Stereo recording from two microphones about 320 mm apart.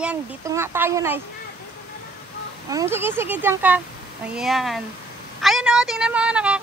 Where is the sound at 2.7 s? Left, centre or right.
Centre.